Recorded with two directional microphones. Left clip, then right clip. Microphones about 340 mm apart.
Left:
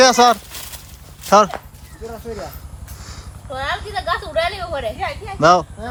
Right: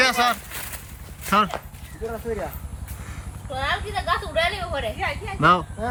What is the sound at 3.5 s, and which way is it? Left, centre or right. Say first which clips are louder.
A woman's voice: left 2 dB; left.